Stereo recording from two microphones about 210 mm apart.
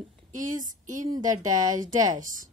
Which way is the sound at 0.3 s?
35° right (ahead or behind).